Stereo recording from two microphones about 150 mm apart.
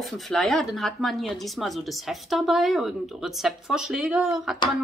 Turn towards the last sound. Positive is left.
turn(degrees=-5)  # may be behind; listen again after turning